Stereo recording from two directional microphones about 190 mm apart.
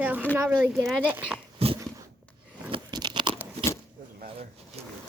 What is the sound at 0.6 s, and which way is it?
Speech, centre (ahead or behind).